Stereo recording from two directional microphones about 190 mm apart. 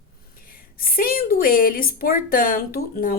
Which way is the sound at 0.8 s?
50° left (ahead or behind).